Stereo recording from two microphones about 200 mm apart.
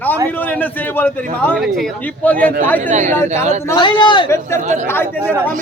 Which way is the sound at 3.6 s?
20° left (ahead or behind).